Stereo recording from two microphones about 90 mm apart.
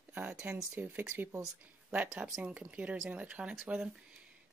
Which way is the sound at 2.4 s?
15° right (ahead or behind).